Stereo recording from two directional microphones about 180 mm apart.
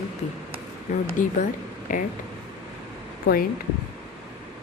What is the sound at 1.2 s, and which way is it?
Speech, 45° left (ahead or behind).